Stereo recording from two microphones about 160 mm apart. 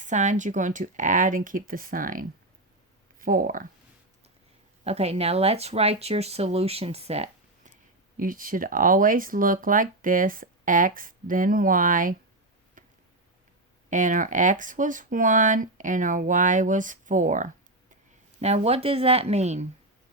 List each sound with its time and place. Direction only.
0.0 s speech: 50° right (ahead or behind)
4.8 s speech: 40° right (ahead or behind)
8.2 s speech: 60° right (ahead or behind)
12.8 s tick-tock: 55° right (ahead or behind)
13.9 s speech: 55° right (ahead or behind)
18.3 s speech: 40° right (ahead or behind)